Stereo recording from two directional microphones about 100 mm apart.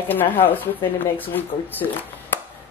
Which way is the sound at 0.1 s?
20° left (ahead or behind).